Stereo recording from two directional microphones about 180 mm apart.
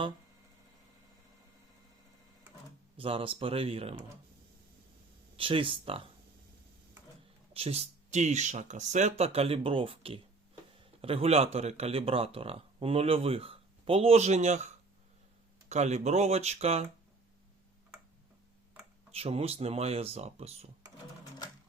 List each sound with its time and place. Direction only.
3.0 s speech: 30° right (ahead or behind)
5.4 s speech: 30° right (ahead or behind)
7.5 s speech: 35° right (ahead or behind)
19.1 s speech: 35° right (ahead or behind)